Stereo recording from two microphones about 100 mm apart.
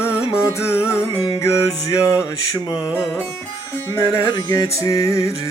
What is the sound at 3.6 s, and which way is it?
Music, 25° left (ahead or behind).